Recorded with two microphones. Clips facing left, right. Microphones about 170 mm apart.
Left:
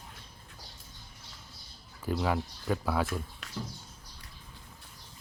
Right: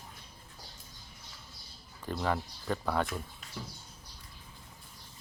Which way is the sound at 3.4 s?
80° left.